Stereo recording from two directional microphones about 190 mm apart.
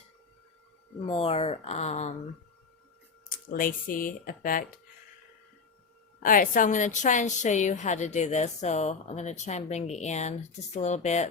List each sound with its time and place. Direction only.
1.0 s a woman's voice: 30° left (ahead or behind)
3.2 s speech: 45° left (ahead or behind)
6.2 s a woman's voice: 45° left (ahead or behind)